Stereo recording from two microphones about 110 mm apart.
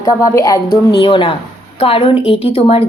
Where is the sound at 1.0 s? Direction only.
50° left (ahead or behind).